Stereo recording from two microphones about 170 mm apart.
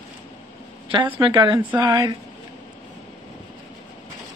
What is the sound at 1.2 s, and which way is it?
Speech, 25° right (ahead or behind).